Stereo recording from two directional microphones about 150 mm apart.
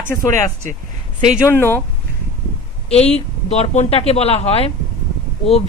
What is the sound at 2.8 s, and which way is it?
Speech, 45° left (ahead or behind).